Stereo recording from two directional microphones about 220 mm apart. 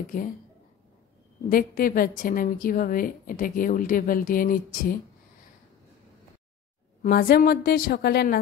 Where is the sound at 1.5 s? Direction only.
40° left (ahead or behind).